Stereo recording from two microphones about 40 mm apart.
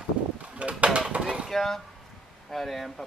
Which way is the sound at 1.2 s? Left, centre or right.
Right.